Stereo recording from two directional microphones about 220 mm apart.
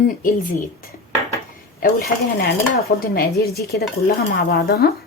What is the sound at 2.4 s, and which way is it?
Dishes, 45° left (ahead or behind).